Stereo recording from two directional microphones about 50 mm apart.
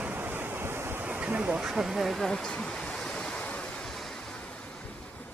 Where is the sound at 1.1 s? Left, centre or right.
Right.